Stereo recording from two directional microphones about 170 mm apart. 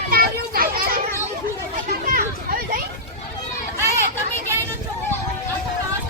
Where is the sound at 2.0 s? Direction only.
55° right (ahead or behind).